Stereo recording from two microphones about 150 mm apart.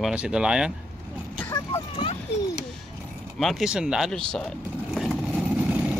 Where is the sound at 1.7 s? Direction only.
40° left (ahead or behind).